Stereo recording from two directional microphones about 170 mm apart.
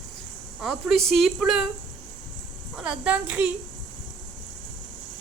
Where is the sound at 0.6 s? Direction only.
Centre (ahead or behind).